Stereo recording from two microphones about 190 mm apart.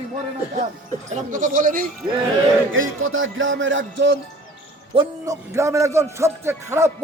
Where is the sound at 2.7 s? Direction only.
90° right; by 4.1 s 75° right (ahead or behind).